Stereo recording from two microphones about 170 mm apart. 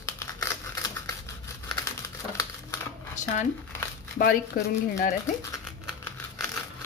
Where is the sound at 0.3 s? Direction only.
20° left (ahead or behind).